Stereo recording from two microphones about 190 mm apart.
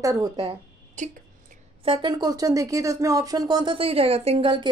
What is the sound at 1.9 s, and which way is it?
A woman's voice, 25° right (ahead or behind).